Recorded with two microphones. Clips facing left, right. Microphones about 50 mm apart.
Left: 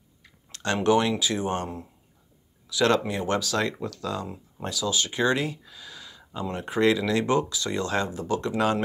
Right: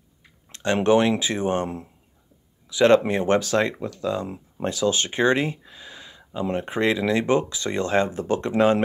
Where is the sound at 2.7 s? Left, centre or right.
Right.